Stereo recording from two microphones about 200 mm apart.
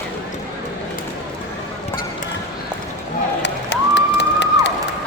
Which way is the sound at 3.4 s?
60° left (ahead or behind).